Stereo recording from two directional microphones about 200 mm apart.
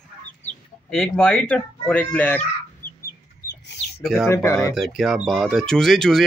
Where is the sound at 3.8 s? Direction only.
30° left (ahead or behind).